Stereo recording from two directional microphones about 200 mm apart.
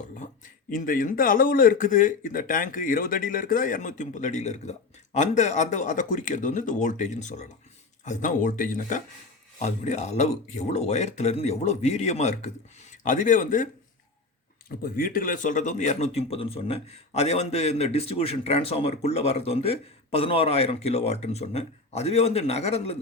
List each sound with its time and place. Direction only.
0.7 s a man's voice: 45° left (ahead or behind)
14.8 s speech: 45° left (ahead or behind)